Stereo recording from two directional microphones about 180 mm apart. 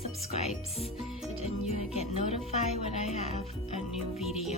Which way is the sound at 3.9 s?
Centre (ahead or behind).